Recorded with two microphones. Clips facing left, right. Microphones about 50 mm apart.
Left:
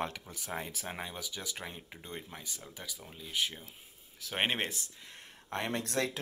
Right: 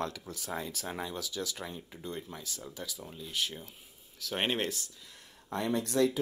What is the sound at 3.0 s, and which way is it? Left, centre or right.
Speech, centre.